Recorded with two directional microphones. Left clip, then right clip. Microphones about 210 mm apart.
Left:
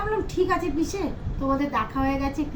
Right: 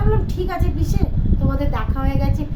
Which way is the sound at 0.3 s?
15° right (ahead or behind).